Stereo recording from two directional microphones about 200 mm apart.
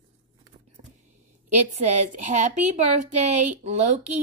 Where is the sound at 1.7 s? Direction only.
35° right (ahead or behind).